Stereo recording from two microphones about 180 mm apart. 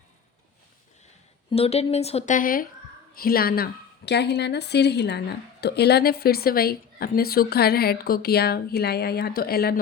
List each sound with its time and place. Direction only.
1.5 s a woman's voice: 35° left (ahead or behind); by 9.8 s 60° left (ahead or behind)